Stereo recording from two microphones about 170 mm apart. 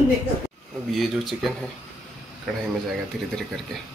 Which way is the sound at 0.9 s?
Centre (ahead or behind).